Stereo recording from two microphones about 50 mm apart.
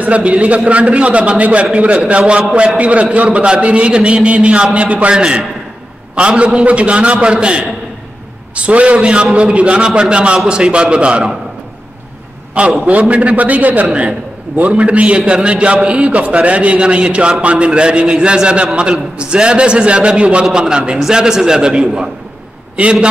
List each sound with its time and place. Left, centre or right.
0.0 s a man's voice: right
12.5 s a man's voice: right